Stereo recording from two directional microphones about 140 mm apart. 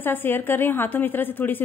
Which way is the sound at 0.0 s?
15° left (ahead or behind).